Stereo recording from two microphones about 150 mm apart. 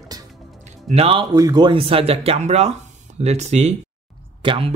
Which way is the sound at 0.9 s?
40° right (ahead or behind).